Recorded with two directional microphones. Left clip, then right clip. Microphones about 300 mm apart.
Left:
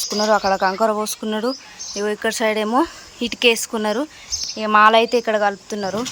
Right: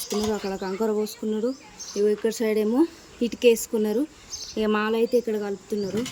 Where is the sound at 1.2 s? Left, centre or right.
Centre.